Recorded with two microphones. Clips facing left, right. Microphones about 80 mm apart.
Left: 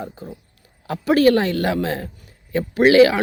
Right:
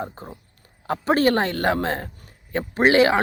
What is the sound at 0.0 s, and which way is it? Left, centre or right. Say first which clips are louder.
A man's voice: even; right.